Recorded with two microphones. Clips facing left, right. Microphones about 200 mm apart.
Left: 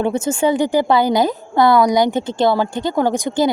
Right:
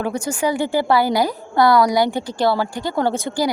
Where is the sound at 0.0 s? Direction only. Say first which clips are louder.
Left 4 dB; 25° left (ahead or behind).